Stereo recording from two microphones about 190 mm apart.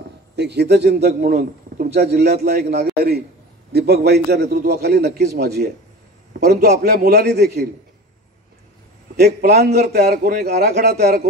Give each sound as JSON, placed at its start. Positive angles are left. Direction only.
{"t": 0.4, "sound": "a man's voice", "side_deg": -60}
{"t": 9.1, "sound": "a man's voice", "side_deg": -55}